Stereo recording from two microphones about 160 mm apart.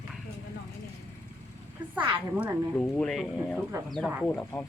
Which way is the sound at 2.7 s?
5° left (ahead or behind).